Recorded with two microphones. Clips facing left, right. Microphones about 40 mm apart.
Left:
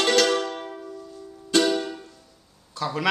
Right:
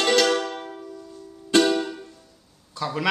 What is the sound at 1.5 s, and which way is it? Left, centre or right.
Music, right.